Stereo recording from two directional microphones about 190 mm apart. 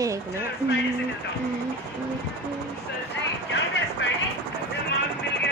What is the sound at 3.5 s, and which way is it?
Vehicle, 75° left (ahead or behind).